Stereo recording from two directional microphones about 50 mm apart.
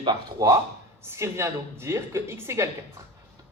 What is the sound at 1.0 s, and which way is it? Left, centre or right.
A woman's voice, right.